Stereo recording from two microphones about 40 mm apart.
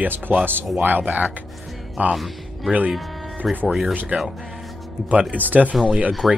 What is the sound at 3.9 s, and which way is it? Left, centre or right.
Speech, right.